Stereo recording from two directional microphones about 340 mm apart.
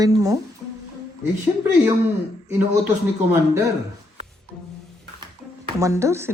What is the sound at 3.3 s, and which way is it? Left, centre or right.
Speech, centre.